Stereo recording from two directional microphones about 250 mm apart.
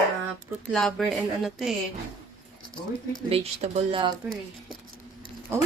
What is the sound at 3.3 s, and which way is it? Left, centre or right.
Speech, right.